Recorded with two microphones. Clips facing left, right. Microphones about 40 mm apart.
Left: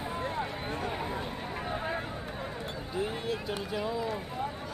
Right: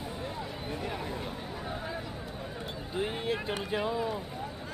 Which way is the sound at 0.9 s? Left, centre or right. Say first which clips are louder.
Left 2 dB; left.